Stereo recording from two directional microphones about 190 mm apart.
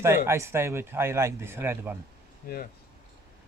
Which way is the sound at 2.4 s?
45° left (ahead or behind).